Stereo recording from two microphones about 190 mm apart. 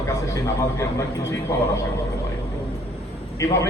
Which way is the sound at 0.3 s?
15° left (ahead or behind).